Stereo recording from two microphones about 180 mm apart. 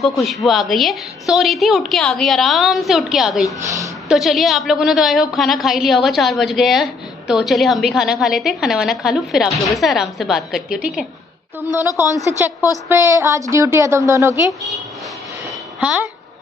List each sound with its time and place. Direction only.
0.0 s a woman's voice: centre (ahead or behind)
11.7 s a woman's voice: 20° left (ahead or behind)
12.8 s a woman's voice: 15° right (ahead or behind)